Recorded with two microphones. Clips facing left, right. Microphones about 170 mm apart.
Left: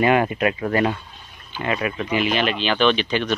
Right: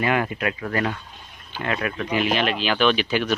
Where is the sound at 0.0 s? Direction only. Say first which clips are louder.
Left 5 dB; 25° left (ahead or behind).